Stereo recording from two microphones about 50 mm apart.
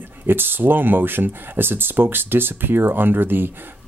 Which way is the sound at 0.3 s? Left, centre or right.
Right.